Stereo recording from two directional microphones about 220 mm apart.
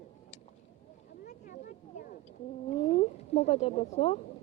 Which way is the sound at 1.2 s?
35° left (ahead or behind).